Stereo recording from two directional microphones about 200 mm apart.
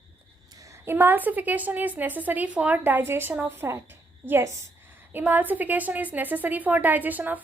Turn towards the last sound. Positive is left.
turn(degrees=-10)  # may be behind; listen again after turning